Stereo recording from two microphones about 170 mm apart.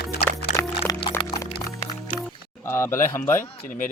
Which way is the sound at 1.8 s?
45° left (ahead or behind).